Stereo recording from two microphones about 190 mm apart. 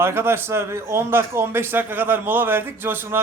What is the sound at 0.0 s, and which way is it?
A man's voice, 10° right (ahead or behind).